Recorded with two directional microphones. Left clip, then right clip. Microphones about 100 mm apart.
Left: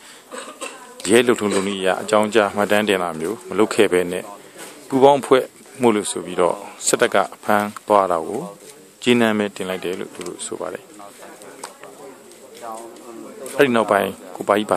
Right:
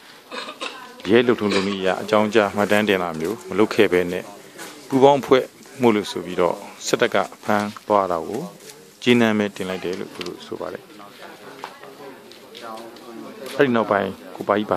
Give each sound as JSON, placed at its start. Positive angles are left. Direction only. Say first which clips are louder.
{"t": 0.3, "sound": "a sound", "louder": "right 2 dB", "side_deg": 0}
{"t": 1.0, "sound": "speech", "louder": "left 1 dB", "side_deg": 15}
{"t": 9.8, "sound": "speech", "louder": "left 1 dB", "side_deg": 20}
{"t": 13.6, "sound": "speech", "louder": "left 3 dB", "side_deg": 20}